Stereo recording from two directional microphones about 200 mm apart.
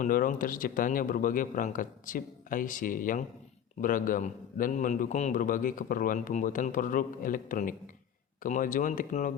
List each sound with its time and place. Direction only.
0.0 s a man's voice: 45° left (ahead or behind)